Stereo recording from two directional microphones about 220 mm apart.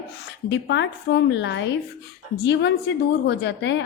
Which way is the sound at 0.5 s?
55° left (ahead or behind).